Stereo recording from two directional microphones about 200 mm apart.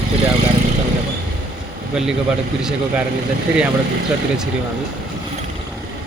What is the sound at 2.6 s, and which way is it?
Speech, 5° right (ahead or behind).